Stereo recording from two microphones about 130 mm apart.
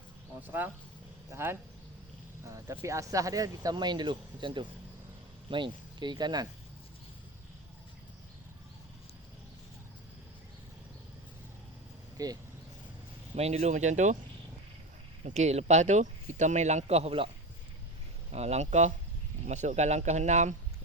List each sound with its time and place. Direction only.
0.4 s speech: 15° right (ahead or behind); by 6.5 s 30° right (ahead or behind)
12.1 s vehicle: 30° right (ahead or behind)
13.3 s speech: 55° right (ahead or behind)
15.2 s speech: 60° right (ahead or behind)
18.3 s speech: 55° right (ahead or behind)